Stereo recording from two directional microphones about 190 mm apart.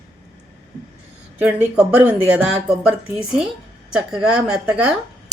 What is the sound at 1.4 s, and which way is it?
Speech, 10° right (ahead or behind).